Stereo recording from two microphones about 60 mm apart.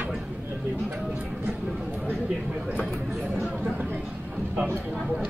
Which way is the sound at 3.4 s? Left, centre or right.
Right.